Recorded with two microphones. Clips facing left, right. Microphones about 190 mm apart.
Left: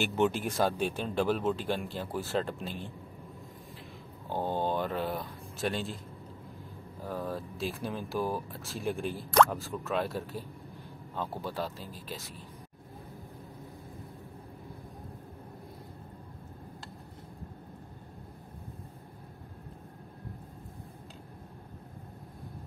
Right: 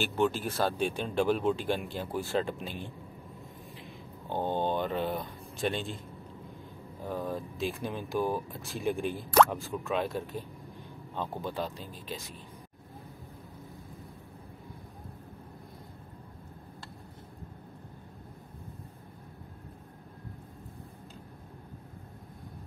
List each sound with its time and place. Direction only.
0.0 s speech: 20° left (ahead or behind); by 2.8 s centre (ahead or behind)
4.3 s speech: 5° left (ahead or behind)
7.1 s speech: centre (ahead or behind)